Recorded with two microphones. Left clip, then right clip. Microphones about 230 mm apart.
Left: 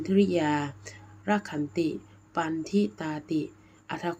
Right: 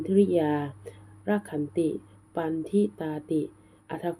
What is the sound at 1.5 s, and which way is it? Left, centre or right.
Speech, left.